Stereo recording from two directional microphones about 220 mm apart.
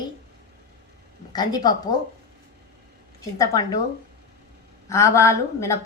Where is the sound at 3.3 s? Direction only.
15° left (ahead or behind).